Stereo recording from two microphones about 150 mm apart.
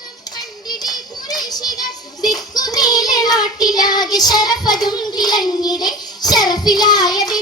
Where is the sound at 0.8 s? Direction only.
25° left (ahead or behind).